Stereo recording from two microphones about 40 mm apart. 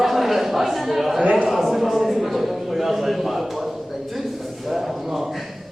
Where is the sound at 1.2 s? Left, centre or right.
Right.